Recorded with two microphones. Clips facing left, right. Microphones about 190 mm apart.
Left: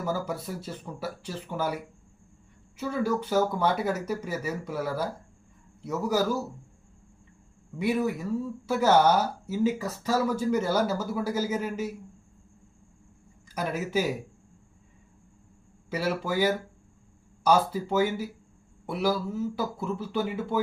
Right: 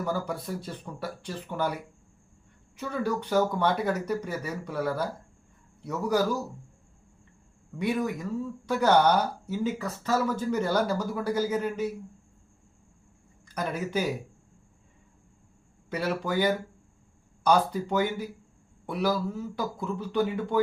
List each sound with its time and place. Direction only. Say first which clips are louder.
0.0 s speech: even; 5° left (ahead or behind)
7.8 s speech: left 2 dB; 5° left (ahead or behind)
13.5 s speech: left 1 dB; 5° left (ahead or behind)
15.9 s speech: even; 5° left (ahead or behind)